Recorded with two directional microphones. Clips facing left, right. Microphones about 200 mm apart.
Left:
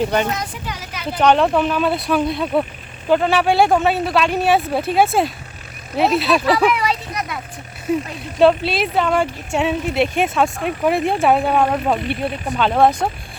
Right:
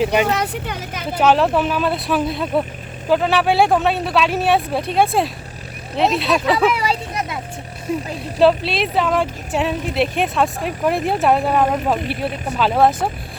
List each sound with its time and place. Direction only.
0.0 s a woman's voice: 5° right (ahead or behind)
0.3 s a woman's voice: 65° right (ahead or behind)
1.1 s speech: 5° right (ahead or behind)
6.7 s a sound: 30° right (ahead or behind)
7.9 s speech: centre (ahead or behind)